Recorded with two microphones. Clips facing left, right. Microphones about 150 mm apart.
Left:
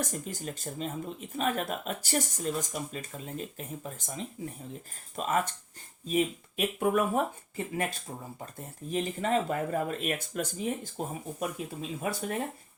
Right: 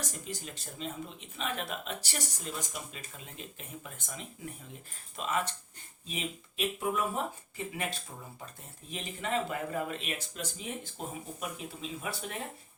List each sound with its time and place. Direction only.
0.0 s speech: 50° left (ahead or behind)
5.1 s speech: 45° left (ahead or behind)